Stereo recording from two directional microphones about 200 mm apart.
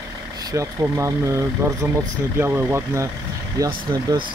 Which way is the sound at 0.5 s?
15° right (ahead or behind).